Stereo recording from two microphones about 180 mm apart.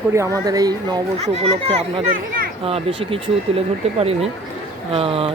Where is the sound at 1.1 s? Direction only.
35° right (ahead or behind).